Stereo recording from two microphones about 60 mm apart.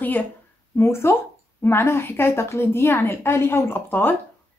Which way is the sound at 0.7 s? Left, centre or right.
Left.